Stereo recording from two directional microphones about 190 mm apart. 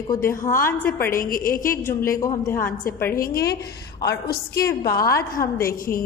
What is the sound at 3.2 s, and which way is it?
A woman's voice, 50° left (ahead or behind).